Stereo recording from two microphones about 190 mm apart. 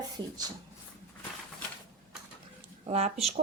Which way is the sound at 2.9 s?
35° right (ahead or behind).